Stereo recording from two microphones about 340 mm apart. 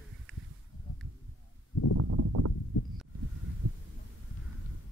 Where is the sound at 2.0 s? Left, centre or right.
Right.